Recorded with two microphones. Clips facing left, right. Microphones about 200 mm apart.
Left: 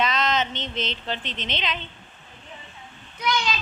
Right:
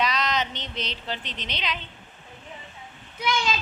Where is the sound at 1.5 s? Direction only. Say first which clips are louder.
Left 2 dB; 5° right (ahead or behind).